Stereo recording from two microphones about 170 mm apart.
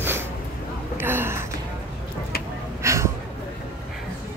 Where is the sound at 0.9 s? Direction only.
15° right (ahead or behind).